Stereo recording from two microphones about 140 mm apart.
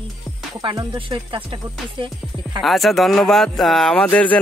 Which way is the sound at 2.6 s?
Centre (ahead or behind).